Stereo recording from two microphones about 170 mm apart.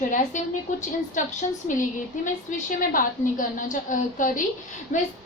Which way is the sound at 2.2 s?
50° left (ahead or behind).